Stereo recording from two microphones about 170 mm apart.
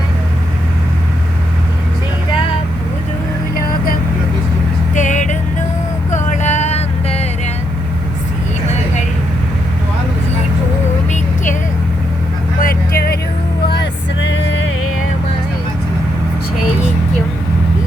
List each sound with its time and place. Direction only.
3.5 s vehicle: 60° left (ahead or behind)
4.9 s music: 45° left (ahead or behind)
6.1 s vehicle: 45° left (ahead or behind)
12.5 s vehicle: 60° left (ahead or behind)
13.7 s music: 90° left